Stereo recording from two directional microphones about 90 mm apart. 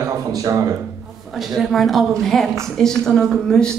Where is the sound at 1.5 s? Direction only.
Centre (ahead or behind).